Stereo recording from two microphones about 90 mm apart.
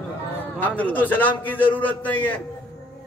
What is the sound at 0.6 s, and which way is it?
A man's voice, 20° left (ahead or behind).